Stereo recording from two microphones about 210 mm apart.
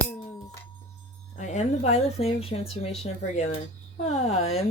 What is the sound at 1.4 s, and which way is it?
Speech, 35° left (ahead or behind).